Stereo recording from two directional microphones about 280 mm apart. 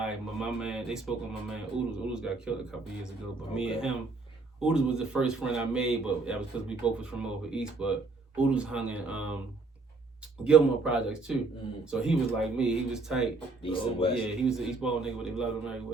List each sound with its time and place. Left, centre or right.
0.0 s a man's voice: centre
3.5 s a man's voice: centre
10.4 s a man's voice: centre
13.6 s speech: centre
14.4 s a man's voice: centre